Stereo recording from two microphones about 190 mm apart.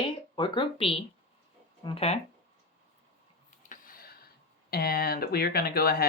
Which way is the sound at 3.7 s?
50° left (ahead or behind).